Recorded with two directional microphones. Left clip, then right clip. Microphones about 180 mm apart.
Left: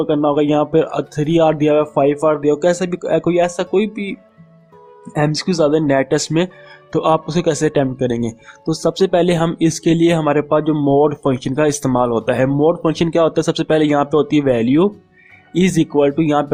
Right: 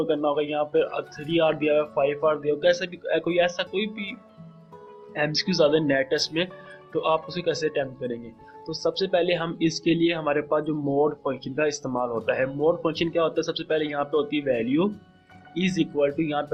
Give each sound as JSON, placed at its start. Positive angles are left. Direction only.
{"t": 0.0, "sound": "speech", "side_deg": 45}